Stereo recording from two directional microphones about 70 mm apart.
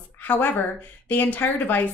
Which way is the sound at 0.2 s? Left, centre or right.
Left.